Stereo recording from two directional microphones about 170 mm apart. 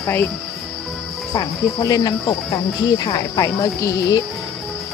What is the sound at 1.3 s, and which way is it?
Speech, 20° left (ahead or behind).